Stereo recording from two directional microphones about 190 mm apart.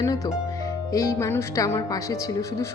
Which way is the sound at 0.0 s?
20° left (ahead or behind).